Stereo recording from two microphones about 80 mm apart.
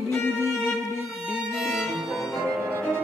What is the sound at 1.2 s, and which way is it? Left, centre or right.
Violin, centre.